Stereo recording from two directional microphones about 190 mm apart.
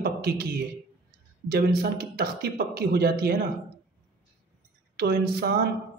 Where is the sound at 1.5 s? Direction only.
55° right (ahead or behind).